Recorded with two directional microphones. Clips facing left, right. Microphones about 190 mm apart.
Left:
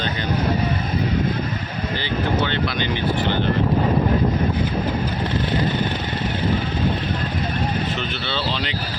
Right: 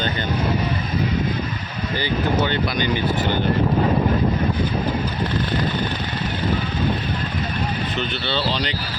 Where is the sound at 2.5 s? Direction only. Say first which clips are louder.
Right 2 dB; 45° right (ahead or behind).